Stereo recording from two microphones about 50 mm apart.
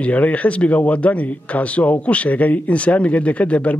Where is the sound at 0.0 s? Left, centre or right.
Left.